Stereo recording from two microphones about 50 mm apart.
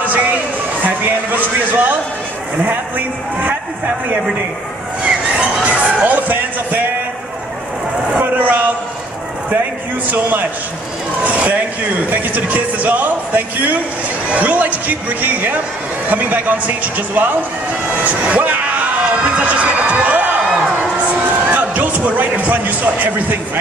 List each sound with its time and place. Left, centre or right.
0.8 s speech: right
5.0 s a sound: right
6.0 s speech: right
8.2 s a man's voice: right
11.2 s speech: right
19.4 s a sound: right
21.5 s speech: right